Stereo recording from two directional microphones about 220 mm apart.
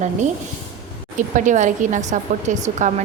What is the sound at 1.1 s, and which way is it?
A woman's voice, 35° right (ahead or behind).